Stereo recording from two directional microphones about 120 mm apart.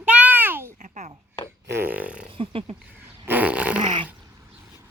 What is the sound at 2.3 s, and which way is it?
Speech, 50° right (ahead or behind).